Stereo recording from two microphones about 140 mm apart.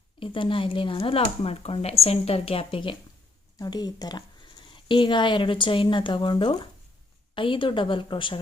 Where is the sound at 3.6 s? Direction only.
30° left (ahead or behind).